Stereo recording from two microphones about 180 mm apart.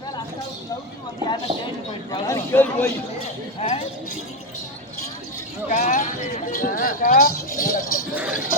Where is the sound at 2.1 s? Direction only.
15° left (ahead or behind).